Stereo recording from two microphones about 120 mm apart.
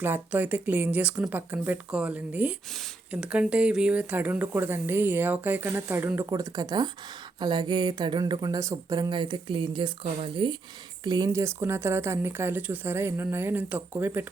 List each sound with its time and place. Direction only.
0.0 s speech: 15° right (ahead or behind); by 11.3 s 40° right (ahead or behind)
11.3 s speech: 25° right (ahead or behind)